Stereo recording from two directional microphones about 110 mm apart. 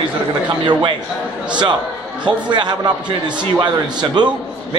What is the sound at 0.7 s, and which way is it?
Speech, 45° right (ahead or behind).